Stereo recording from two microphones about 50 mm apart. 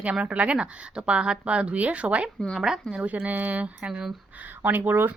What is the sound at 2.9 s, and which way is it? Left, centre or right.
Speech, right.